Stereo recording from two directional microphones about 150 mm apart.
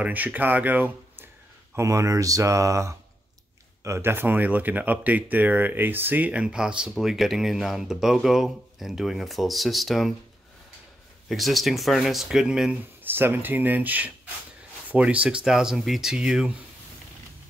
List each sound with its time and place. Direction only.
0.0 s speech: 10° right (ahead or behind)
11.2 s speech: centre (ahead or behind)